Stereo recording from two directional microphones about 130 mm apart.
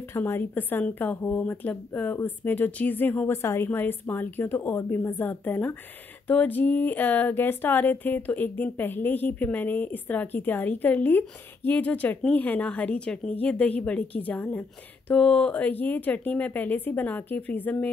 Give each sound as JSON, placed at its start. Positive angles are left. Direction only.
{"t": 0.1, "sound": "speech", "side_deg": 15}